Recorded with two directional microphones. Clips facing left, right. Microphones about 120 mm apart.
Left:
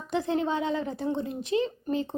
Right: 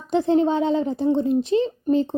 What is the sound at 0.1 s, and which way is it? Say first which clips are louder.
A woman's voice: right 8 dB; 30° right (ahead or behind).